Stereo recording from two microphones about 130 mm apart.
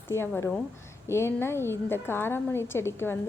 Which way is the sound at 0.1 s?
20° left (ahead or behind).